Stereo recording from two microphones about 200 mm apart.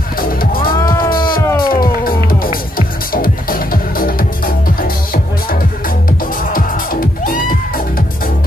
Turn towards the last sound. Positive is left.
turn(degrees=45)  # may be behind; listen again after turning